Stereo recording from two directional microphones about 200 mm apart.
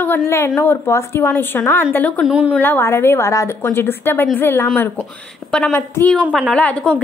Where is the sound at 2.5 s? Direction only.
10° left (ahead or behind).